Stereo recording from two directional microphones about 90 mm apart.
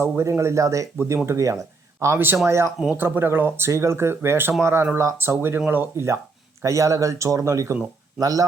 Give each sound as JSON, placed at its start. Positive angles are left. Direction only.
{"t": 0.0, "sound": "speech", "side_deg": -30}